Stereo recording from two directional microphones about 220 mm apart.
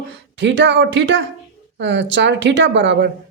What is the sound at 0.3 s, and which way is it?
A woman's voice, 55° right (ahead or behind).